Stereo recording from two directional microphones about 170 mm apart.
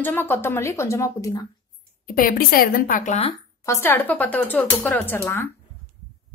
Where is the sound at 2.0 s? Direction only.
55° left (ahead or behind).